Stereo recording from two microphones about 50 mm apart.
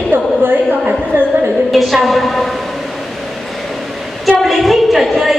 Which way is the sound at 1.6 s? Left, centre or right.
Centre.